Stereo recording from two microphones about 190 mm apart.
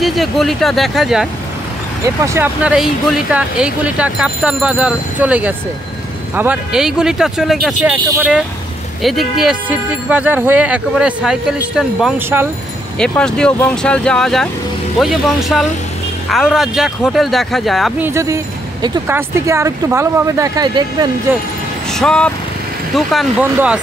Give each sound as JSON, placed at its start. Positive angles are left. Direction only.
{"t": 0.0, "sound": "speech", "side_deg": 0}
{"t": 2.0, "sound": "speech", "side_deg": -15}
{"t": 13.0, "sound": "speech", "side_deg": 5}
{"t": 18.0, "sound": "speech", "side_deg": -15}
{"t": 21.9, "sound": "speech", "side_deg": 5}